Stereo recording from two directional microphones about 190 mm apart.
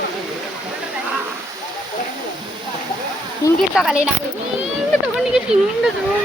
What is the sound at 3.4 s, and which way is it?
Speech, 20° left (ahead or behind).